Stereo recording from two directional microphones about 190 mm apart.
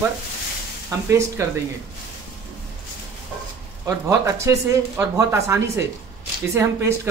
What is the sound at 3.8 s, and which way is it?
Speech, 15° right (ahead or behind).